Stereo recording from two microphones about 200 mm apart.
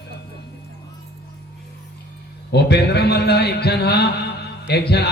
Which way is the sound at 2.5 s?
55° left (ahead or behind).